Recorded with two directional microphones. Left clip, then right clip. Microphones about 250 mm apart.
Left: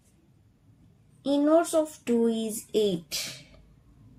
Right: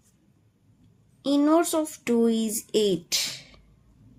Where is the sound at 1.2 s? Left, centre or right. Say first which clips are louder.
Right 1 dB; right.